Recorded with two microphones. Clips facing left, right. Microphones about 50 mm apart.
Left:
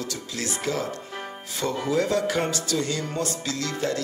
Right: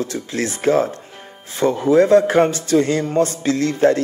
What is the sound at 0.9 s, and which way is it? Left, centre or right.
Music, left.